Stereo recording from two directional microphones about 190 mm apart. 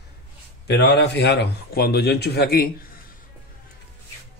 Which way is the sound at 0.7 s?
60° left (ahead or behind).